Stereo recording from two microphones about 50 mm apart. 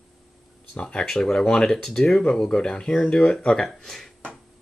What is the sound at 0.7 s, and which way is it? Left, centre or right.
Speech, left.